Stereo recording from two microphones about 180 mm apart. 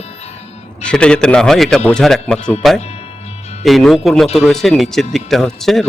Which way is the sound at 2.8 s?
35° left (ahead or behind).